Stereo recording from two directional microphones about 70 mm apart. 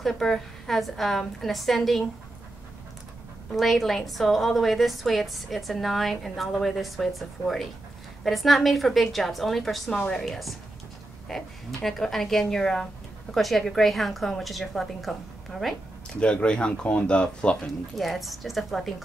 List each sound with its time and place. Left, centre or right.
0.0 s a woman's voice: centre
3.5 s a woman's voice: centre
9.8 s a woman's voice: centre
16.2 s speech: centre
17.9 s a woman's voice: centre